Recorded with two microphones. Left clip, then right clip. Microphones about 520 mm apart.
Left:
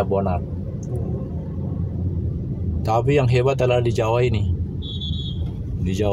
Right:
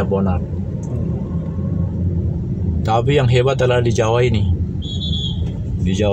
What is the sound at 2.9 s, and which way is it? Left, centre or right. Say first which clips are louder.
Speech: right 3 dB; left.